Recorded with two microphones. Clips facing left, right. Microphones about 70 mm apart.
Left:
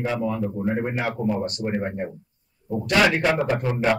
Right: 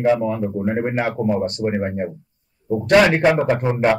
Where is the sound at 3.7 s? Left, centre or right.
Right.